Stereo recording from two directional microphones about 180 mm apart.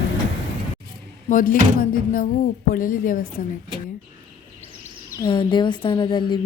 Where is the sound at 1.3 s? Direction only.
50° left (ahead or behind).